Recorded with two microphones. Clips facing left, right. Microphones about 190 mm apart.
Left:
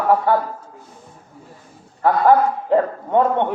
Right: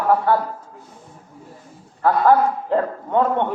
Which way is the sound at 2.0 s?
15° left (ahead or behind).